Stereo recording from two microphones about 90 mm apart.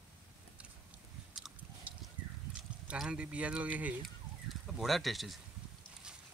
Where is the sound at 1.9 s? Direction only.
15° right (ahead or behind).